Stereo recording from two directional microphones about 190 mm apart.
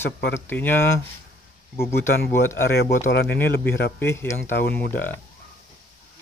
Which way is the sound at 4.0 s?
10° left (ahead or behind).